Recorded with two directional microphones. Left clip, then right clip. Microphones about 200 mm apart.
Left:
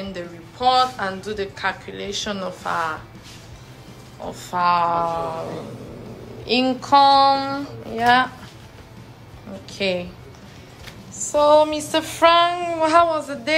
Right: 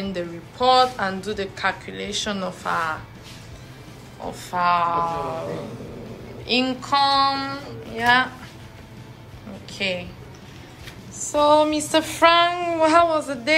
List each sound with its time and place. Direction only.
0.1 s a woman's voice: 10° left (ahead or behind)
4.3 s a woman's voice: 15° left (ahead or behind)
6.4 s a woman's voice: 20° left (ahead or behind)
9.7 s a woman's voice: 25° left (ahead or behind)
11.1 s a woman's voice: 15° left (ahead or behind)